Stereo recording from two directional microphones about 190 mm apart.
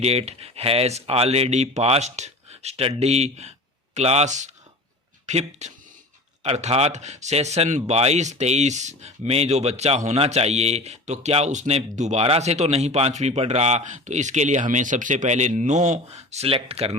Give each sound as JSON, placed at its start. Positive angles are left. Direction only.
{"t": 0.0, "sound": "speech", "side_deg": -35}